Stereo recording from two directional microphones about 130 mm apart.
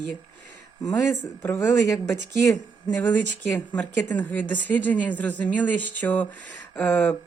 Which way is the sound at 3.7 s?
10° left (ahead or behind).